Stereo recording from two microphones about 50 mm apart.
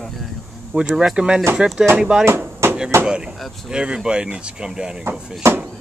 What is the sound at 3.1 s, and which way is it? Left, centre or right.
Speech, centre.